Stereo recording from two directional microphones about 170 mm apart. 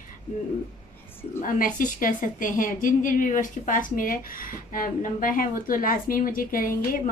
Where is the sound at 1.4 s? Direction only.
55° left (ahead or behind).